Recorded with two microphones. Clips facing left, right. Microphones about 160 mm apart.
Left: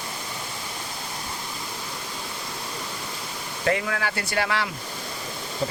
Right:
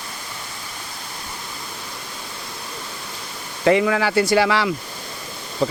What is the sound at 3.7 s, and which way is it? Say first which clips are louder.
Speech: right 9 dB; 90° right.